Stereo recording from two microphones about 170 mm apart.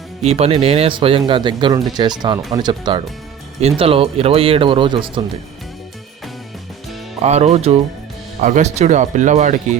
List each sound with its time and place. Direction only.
0.2 s speech: 40° right (ahead or behind)
7.2 s speech: 40° right (ahead or behind)